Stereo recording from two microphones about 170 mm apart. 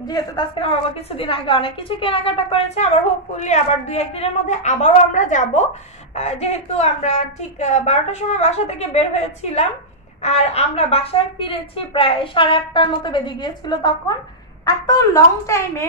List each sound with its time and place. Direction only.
0.0 s a woman's voice: 25° left (ahead or behind)